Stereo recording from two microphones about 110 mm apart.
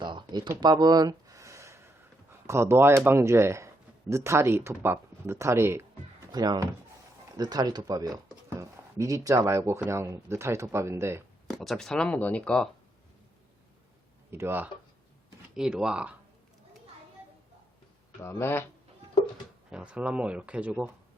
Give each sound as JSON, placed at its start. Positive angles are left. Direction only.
{"t": 0.0, "sound": "a sound", "side_deg": -45}
{"t": 2.5, "sound": "speech", "side_deg": -25}
{"t": 6.3, "sound": "speech", "side_deg": -40}
{"t": 11.4, "sound": "speech", "side_deg": 0}
{"t": 14.3, "sound": "speech", "side_deg": -20}
{"t": 15.5, "sound": "speech", "side_deg": -5}
{"t": 18.2, "sound": "speech", "side_deg": 20}
{"t": 19.7, "sound": "speech", "side_deg": -10}